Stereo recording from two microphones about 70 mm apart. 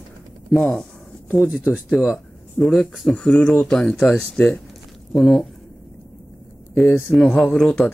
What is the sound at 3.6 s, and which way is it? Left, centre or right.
Speech, centre.